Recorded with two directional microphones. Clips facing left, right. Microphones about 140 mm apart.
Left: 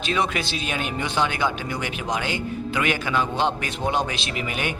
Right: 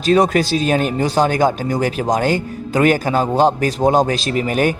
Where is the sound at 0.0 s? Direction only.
40° right (ahead or behind).